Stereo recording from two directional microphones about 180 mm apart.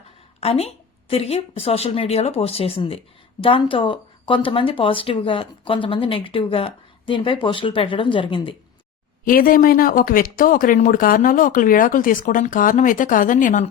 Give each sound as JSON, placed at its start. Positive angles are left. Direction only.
{"t": 0.3, "sound": "a woman's voice", "side_deg": 35}
{"t": 9.2, "sound": "speech", "side_deg": 55}